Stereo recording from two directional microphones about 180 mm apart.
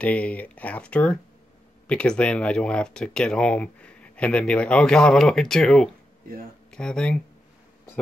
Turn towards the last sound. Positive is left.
turn(degrees=5)  # may be behind; listen again after turning